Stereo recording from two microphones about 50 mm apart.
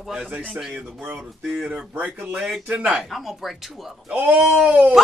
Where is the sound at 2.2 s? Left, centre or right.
Centre.